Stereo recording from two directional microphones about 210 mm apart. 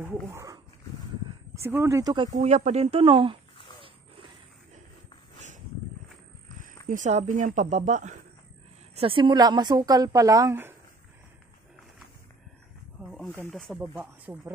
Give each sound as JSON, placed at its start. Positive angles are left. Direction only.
{"t": 0.0, "sound": "speech", "side_deg": -10}
{"t": 2.3, "sound": "speech", "side_deg": -35}
{"t": 6.9, "sound": "speech", "side_deg": -35}
{"t": 13.0, "sound": "wild animals", "side_deg": 0}
{"t": 13.4, "sound": "speech", "side_deg": 5}
{"t": 13.7, "sound": "speech", "side_deg": -10}